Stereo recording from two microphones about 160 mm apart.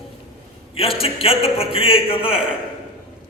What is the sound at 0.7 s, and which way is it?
A man's voice, 35° left (ahead or behind).